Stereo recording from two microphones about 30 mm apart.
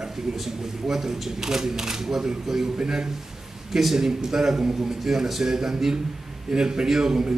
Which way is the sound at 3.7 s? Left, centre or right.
Centre.